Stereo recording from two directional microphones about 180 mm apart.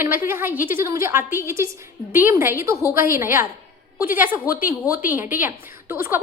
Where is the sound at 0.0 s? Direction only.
10° right (ahead or behind).